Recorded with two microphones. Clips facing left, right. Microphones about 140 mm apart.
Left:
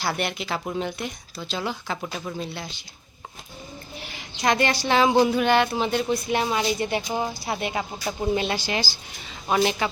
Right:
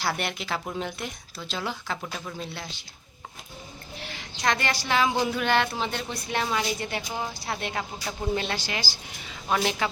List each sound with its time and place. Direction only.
0.0 s speech: centre (ahead or behind)
4.0 s speech: 10° left (ahead or behind)
9.6 s speech: 5° left (ahead or behind)